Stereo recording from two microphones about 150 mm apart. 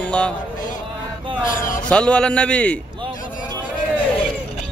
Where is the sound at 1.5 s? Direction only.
65° left (ahead or behind).